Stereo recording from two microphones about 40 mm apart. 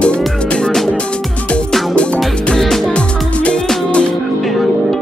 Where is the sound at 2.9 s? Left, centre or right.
Left.